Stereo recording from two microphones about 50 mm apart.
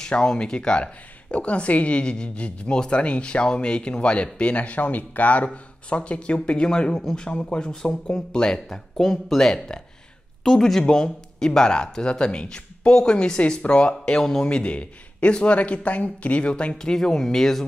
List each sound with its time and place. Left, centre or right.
0.0 s a woman's voice: centre
14.2 s speech: centre
14.5 s a woman's voice: left
16.7 s speech: centre